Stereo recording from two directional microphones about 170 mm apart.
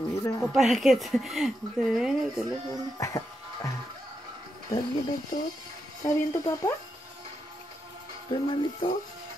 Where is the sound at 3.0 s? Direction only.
20° left (ahead or behind).